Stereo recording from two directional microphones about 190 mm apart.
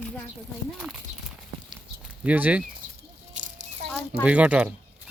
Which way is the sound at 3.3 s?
40° right (ahead or behind).